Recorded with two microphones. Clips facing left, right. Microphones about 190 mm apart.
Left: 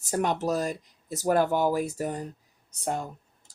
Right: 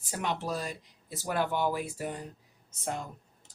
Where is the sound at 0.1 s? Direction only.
45° left (ahead or behind).